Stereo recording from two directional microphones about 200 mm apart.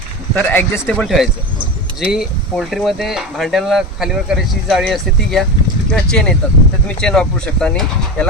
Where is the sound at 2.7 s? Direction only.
Centre (ahead or behind).